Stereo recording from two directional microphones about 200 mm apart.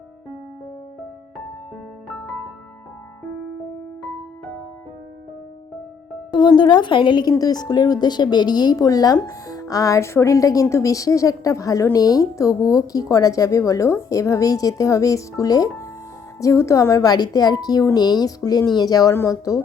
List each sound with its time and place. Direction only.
6.3 s a woman's voice: 20° left (ahead or behind)